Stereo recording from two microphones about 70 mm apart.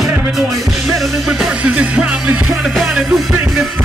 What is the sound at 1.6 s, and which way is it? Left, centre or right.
Music, centre.